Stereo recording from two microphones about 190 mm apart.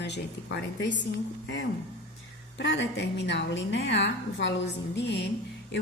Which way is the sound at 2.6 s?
70° left (ahead or behind).